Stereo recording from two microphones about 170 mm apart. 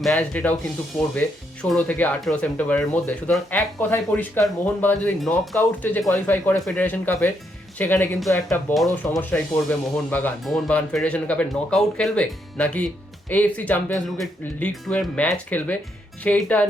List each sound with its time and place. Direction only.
0.0 s speech: 5° left (ahead or behind)